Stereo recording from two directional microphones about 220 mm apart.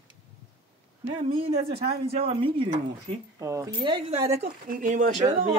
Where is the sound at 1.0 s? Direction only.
25° right (ahead or behind).